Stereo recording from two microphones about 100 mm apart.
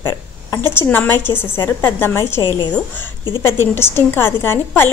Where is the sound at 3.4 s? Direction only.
25° left (ahead or behind).